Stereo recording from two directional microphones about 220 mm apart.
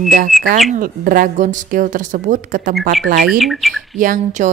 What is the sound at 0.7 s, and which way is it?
A woman's voice, 40° right (ahead or behind).